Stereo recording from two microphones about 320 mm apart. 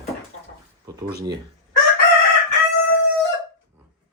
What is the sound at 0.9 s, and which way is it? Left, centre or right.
Speech, centre.